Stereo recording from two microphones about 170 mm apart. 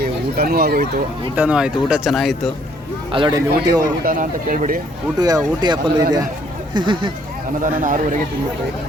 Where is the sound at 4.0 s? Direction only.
55° right (ahead or behind).